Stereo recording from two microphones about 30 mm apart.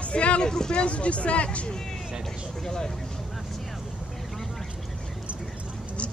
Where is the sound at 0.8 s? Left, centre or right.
Left.